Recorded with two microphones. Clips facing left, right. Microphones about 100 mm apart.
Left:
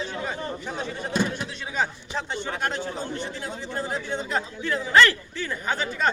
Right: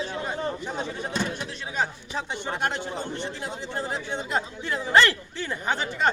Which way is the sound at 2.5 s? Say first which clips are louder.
Right 1 dB; 20° right (ahead or behind).